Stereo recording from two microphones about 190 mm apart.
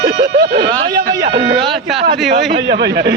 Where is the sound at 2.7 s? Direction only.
65° right (ahead or behind).